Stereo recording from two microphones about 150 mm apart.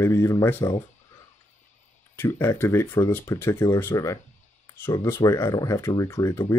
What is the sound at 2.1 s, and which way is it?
Speech, 15° left (ahead or behind).